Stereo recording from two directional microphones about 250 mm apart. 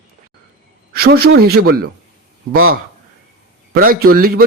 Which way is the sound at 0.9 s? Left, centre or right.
Right.